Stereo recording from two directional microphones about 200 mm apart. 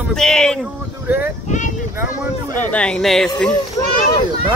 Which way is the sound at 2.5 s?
5° left (ahead or behind).